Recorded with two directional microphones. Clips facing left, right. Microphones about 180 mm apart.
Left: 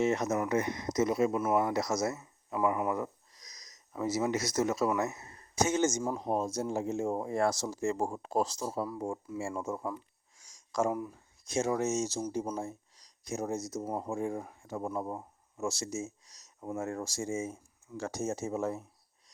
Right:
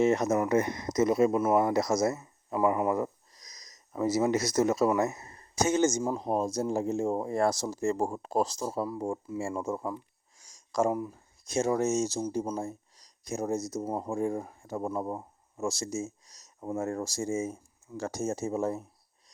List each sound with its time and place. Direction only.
0.0 s speech: 40° right (ahead or behind)
10.3 s a sound: 35° right (ahead or behind)
11.4 s speech: 40° right (ahead or behind)